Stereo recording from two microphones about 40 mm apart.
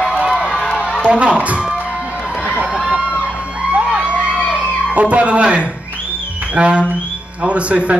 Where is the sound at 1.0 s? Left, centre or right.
Right.